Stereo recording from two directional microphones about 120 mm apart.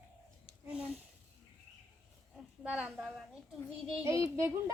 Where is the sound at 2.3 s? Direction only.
5° right (ahead or behind).